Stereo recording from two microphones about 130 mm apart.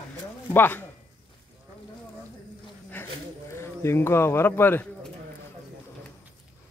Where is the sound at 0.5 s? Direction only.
15° left (ahead or behind).